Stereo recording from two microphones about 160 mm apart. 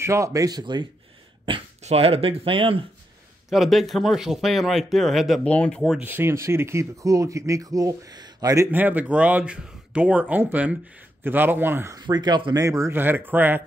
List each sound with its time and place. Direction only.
0.0 s speech: 20° right (ahead or behind)
1.8 s speech: 40° right (ahead or behind)
3.4 s speech: centre (ahead or behind); by 8.6 s 20° right (ahead or behind)
8.7 s speech: 10° right (ahead or behind)
12.0 s speech: 25° right (ahead or behind)